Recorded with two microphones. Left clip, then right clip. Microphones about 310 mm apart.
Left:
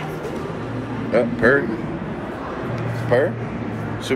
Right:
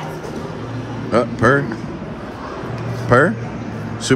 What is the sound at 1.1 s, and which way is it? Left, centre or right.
Speech, right.